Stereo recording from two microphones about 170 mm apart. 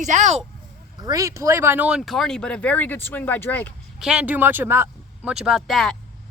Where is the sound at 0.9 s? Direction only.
20° right (ahead or behind); by 3.7 s 10° left (ahead or behind).